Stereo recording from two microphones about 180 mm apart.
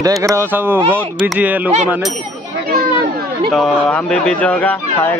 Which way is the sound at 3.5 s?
5° left (ahead or behind).